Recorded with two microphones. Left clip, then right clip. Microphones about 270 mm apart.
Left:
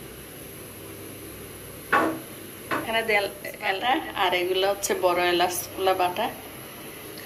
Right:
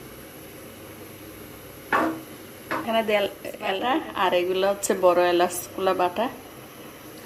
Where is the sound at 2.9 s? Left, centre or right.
Right.